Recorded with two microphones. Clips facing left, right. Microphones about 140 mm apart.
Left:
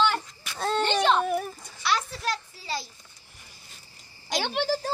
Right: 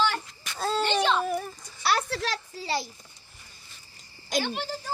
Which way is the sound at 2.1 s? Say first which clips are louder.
Right 1 dB; 90° right.